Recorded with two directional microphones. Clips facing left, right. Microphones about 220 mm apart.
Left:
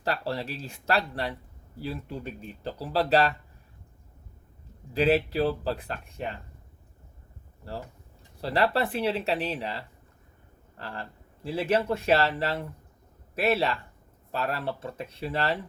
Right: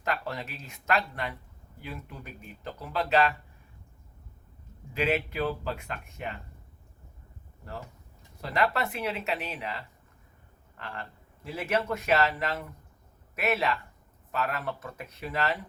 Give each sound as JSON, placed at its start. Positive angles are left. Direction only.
{"t": 0.0, "sound": "speech", "side_deg": 35}
{"t": 4.9, "sound": "speech", "side_deg": 35}
{"t": 7.7, "sound": "a man's voice", "side_deg": 30}